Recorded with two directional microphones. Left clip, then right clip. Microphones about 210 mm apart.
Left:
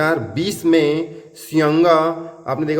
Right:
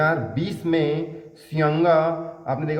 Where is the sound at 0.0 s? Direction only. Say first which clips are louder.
Left 4 dB; 50° left (ahead or behind).